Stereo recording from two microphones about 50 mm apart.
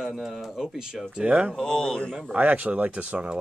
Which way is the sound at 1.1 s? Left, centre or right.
Right.